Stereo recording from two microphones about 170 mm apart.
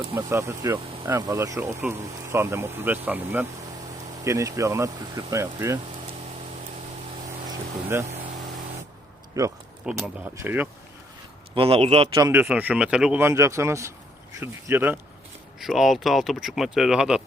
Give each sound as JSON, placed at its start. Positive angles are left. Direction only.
{"t": 0.1, "sound": "speech", "side_deg": -15}
{"t": 7.9, "sound": "speech", "side_deg": -15}
{"t": 9.4, "sound": "speech", "side_deg": -20}
{"t": 9.9, "sound": "speech", "side_deg": -5}
{"t": 11.5, "sound": "speech", "side_deg": -30}
{"t": 12.1, "sound": "speech", "side_deg": -15}
{"t": 15.6, "sound": "speech", "side_deg": 0}